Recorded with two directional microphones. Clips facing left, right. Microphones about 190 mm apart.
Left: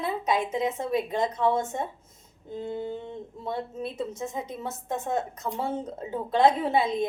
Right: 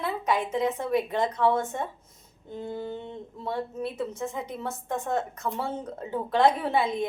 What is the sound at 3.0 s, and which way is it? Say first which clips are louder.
A woman's voice: left 1 dB; 10° left (ahead or behind).